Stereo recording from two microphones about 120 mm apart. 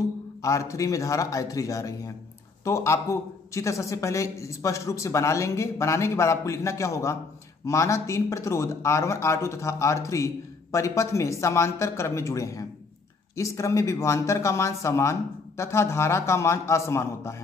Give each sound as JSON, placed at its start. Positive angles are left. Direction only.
{"t": 0.4, "sound": "speech", "side_deg": 25}